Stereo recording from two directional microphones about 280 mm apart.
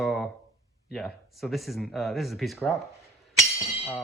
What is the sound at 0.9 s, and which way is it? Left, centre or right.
Speech, centre.